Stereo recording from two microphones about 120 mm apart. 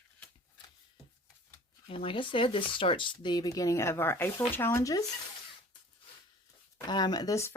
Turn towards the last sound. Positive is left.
turn(degrees=25)  # may be behind; listen again after turning